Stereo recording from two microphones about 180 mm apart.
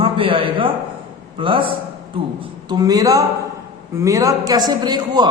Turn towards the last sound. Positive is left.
turn(degrees=-25)  # may be behind; listen again after turning